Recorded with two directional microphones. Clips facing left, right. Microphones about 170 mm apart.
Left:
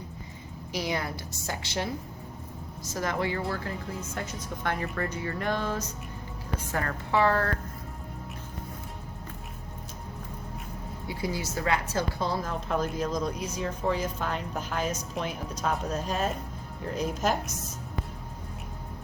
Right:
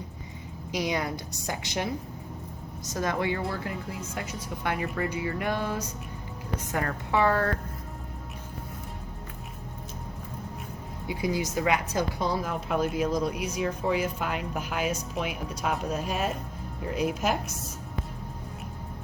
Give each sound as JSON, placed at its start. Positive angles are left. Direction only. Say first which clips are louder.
{"t": 0.7, "sound": "a woman's voice", "louder": "right 2 dB", "side_deg": -20}
{"t": 2.9, "sound": "a woman's voice", "louder": "right 1 dB", "side_deg": -20}
{"t": 11.1, "sound": "a woman's voice", "louder": "right 4 dB", "side_deg": -20}